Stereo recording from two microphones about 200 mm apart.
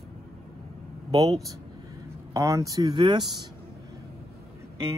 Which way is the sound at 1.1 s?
30° right (ahead or behind).